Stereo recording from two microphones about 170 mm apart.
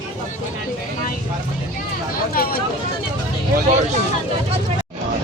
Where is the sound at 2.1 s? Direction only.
60° left (ahead or behind).